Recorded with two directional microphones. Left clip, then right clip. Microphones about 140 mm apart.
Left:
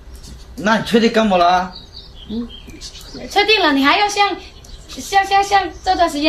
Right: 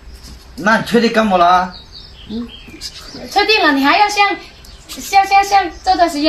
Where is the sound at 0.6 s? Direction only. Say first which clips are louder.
Right 2 dB; 20° left (ahead or behind).